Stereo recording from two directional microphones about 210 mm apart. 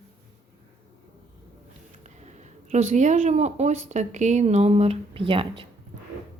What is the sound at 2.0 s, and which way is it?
A woman's voice, 35° right (ahead or behind).